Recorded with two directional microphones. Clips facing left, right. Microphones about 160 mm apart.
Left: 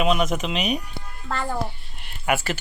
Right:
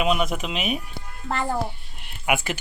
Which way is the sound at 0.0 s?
Centre (ahead or behind).